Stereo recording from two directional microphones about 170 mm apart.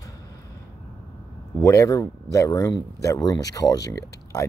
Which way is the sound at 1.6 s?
20° left (ahead or behind).